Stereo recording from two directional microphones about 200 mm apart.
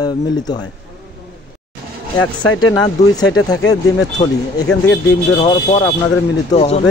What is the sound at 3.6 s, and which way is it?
Speech, 70° left (ahead or behind).